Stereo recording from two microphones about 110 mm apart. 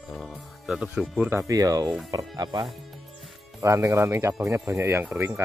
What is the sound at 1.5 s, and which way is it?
Speech, 35° right (ahead or behind).